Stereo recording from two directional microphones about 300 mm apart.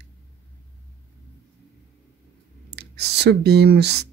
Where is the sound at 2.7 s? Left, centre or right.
Right.